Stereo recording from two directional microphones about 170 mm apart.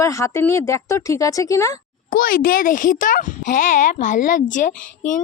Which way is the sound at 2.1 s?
55° left (ahead or behind).